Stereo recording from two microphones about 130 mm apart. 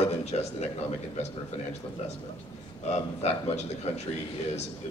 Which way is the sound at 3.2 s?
55° left (ahead or behind).